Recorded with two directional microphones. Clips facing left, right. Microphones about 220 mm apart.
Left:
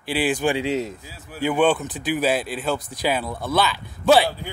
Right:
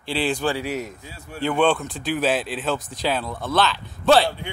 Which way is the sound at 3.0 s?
10° left (ahead or behind).